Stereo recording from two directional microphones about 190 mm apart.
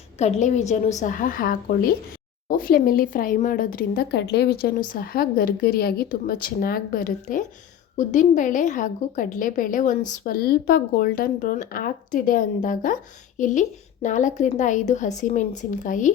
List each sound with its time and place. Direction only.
0.2 s a woman's voice: 35° left (ahead or behind)